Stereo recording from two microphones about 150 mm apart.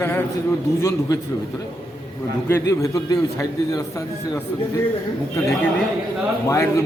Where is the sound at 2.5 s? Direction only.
20° left (ahead or behind).